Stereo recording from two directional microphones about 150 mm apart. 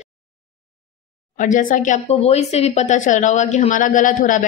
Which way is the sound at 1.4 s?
60° left (ahead or behind).